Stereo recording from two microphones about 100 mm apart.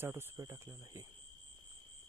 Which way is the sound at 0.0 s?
25° right (ahead or behind).